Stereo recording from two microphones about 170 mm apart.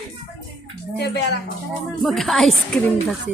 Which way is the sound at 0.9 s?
75° left (ahead or behind).